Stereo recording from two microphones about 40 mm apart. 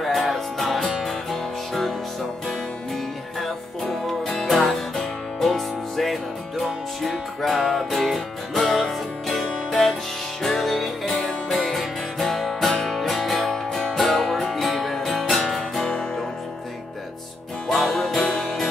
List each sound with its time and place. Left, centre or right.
0.0 s music: centre
3.3 s music: centre
17.6 s music: centre
18.2 s music: centre